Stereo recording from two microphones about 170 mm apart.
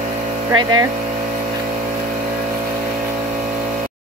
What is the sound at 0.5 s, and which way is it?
Speech, 25° right (ahead or behind).